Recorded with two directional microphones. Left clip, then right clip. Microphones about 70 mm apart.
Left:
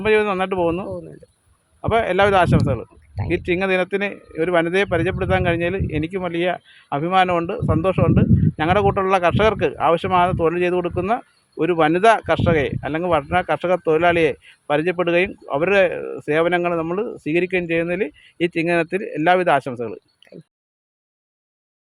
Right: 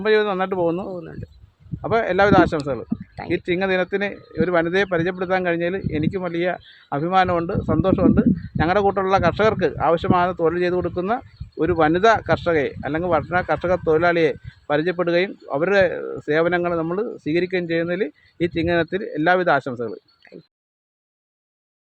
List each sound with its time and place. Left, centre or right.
0.0 s speech: centre
0.9 s speech: right
1.8 s speech: centre
19.8 s a sound: centre